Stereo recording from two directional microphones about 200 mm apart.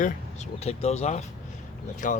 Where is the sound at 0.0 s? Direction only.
35° left (ahead or behind).